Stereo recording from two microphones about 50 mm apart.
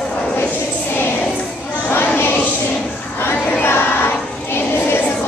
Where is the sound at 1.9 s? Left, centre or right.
Left.